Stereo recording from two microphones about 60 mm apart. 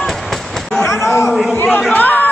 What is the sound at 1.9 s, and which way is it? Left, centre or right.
Chatter, left.